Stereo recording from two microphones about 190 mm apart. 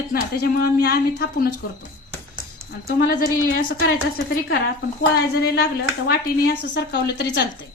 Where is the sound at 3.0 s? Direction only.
50° left (ahead or behind).